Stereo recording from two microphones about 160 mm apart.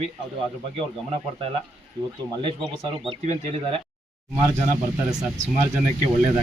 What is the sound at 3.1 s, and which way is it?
Speech, 45° right (ahead or behind).